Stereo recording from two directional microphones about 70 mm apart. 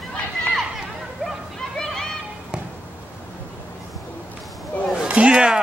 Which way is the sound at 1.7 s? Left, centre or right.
Centre.